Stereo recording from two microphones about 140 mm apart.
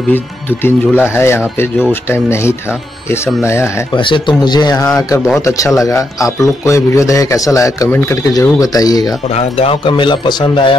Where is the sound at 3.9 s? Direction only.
35° left (ahead or behind).